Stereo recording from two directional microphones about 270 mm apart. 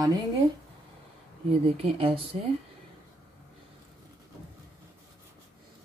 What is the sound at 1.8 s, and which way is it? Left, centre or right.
Speech, right.